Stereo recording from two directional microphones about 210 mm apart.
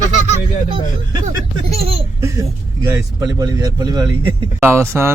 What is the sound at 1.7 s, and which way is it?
Speech, 30° right (ahead or behind).